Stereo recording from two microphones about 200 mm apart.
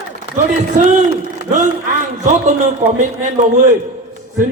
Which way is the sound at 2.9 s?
40° right (ahead or behind).